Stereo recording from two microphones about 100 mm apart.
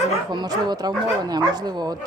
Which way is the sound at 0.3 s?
45° right (ahead or behind).